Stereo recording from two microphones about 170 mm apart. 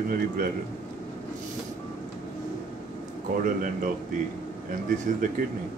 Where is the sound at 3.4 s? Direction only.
55° right (ahead or behind).